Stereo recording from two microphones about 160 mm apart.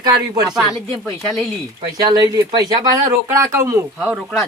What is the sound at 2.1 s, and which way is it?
Speech, 25° right (ahead or behind).